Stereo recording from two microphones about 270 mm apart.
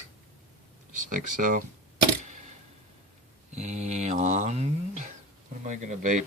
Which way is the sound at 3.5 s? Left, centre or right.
Right.